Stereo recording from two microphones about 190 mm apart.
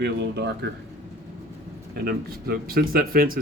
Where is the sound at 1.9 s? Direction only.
55° right (ahead or behind).